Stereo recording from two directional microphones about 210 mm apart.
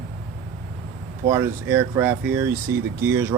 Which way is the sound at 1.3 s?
10° right (ahead or behind).